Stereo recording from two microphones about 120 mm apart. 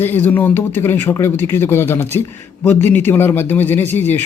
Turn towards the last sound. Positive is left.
turn(degrees=15)  # may be behind; listen again after turning